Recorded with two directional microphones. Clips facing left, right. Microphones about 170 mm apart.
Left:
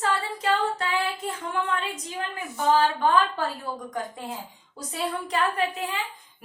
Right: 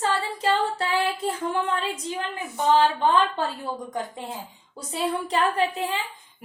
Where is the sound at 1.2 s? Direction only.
35° right (ahead or behind).